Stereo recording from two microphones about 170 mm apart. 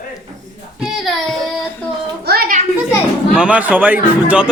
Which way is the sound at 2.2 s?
65° right (ahead or behind).